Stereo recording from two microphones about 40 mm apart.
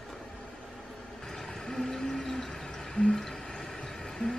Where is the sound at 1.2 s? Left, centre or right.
Centre.